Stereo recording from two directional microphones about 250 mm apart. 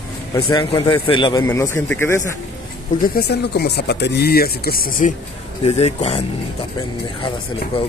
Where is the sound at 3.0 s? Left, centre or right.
Left.